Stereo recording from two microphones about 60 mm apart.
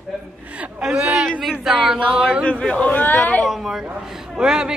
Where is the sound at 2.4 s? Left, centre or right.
Left.